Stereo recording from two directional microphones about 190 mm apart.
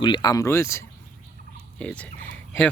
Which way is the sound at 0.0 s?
25° left (ahead or behind).